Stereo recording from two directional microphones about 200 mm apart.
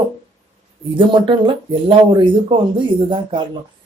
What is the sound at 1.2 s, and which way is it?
Speech, 25° right (ahead or behind).